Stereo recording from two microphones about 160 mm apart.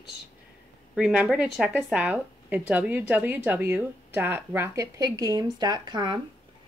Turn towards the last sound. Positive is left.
turn(degrees=-25)  # may be behind; listen again after turning